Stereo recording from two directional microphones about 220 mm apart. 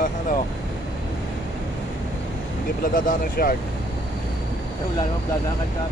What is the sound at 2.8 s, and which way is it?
Speech, 40° left (ahead or behind).